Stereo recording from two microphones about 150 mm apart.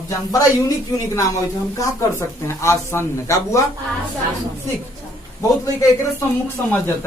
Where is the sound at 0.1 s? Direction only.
25° left (ahead or behind).